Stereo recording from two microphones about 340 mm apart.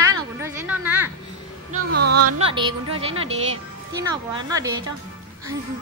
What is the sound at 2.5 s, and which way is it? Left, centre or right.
Speech, centre.